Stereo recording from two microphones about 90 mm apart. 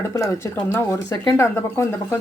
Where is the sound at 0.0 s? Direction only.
30° left (ahead or behind).